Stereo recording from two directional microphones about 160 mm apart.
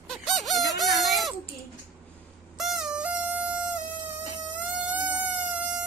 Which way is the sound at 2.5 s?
Centre (ahead or behind).